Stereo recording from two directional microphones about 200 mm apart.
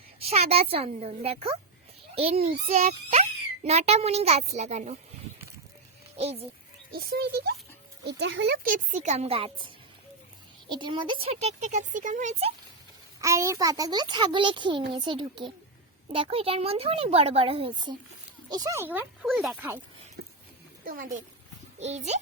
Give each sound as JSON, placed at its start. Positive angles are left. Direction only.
{"t": 0.2, "sound": "a child's voice", "side_deg": -30}
{"t": 6.1, "sound": "a child's voice", "side_deg": -30}
{"t": 6.9, "sound": "a child's voice", "side_deg": -50}
{"t": 8.6, "sound": "a child's voice", "side_deg": -40}
{"t": 13.2, "sound": "a child's voice", "side_deg": -15}
{"t": 20.2, "sound": "a sound", "side_deg": -50}
{"t": 20.8, "sound": "a child's voice", "side_deg": -40}